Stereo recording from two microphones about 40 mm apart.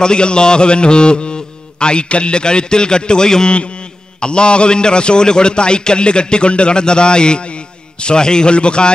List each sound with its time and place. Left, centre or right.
0.0 s a man's voice: left